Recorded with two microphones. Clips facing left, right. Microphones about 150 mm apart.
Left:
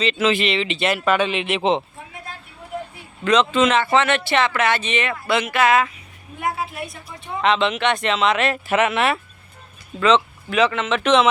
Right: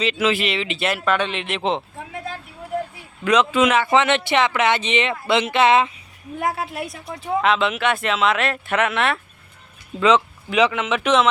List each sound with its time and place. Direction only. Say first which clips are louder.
0.0 s speech: left 1 dB; 10° right (ahead or behind)
3.2 s speech: even; 10° right (ahead or behind)
6.4 s a woman's voice: right 1 dB; 90° right
7.4 s speech: left 2 dB; 5° right (ahead or behind)
10.0 s speech: even; 15° right (ahead or behind)